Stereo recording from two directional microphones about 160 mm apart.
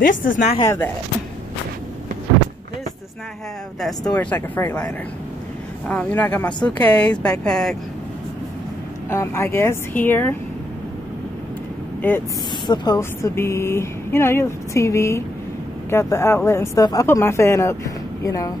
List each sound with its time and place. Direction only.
0.0 s a woman's voice: 55° left (ahead or behind)
0.6 s speech: 15° left (ahead or behind)
3.8 s speech: 5° left (ahead or behind)
5.9 s speech: 10° left (ahead or behind)
9.1 s speech: 15° left (ahead or behind)
12.6 s speech: 25° left (ahead or behind)